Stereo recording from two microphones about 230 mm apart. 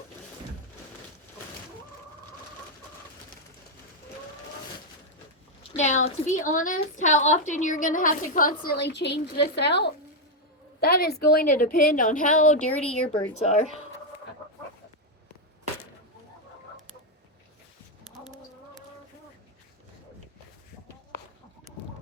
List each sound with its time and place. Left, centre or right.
5.7 s a woman's voice: left